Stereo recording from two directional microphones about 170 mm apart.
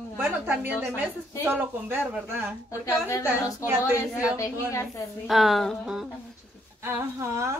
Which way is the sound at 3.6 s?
15° right (ahead or behind).